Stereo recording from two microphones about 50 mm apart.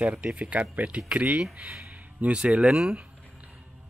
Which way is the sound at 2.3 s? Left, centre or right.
Right.